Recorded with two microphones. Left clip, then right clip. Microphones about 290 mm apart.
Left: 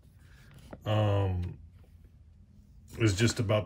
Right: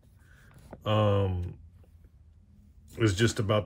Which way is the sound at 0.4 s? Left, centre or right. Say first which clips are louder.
Right 4 dB; centre.